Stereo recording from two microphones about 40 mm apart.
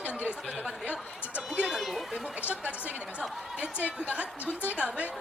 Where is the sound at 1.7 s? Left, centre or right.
Centre.